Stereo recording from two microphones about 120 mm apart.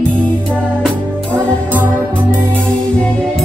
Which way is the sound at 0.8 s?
10° left (ahead or behind).